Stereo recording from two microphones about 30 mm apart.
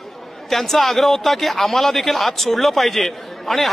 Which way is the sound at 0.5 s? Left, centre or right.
Centre.